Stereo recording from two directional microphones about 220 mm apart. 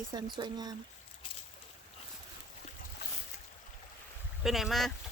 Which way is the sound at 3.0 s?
50° left (ahead or behind).